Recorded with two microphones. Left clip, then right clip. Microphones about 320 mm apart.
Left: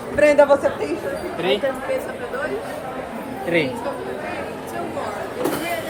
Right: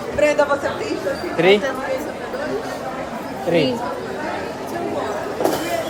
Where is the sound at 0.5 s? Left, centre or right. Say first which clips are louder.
Left 4 dB; left.